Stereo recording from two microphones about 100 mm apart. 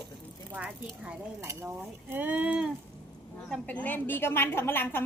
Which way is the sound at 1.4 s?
25° right (ahead or behind).